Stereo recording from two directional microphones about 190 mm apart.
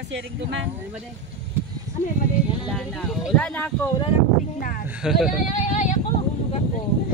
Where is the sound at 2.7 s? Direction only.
Centre (ahead or behind).